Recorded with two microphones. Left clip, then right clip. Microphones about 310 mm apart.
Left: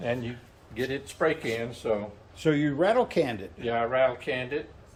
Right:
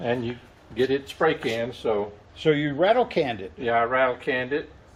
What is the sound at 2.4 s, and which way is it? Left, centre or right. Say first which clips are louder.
Speech: right 3 dB; centre.